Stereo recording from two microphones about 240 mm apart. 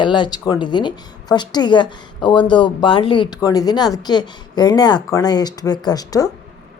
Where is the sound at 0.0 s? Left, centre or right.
Centre.